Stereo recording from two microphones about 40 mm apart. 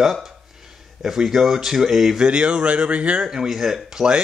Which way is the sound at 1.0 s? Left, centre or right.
Centre.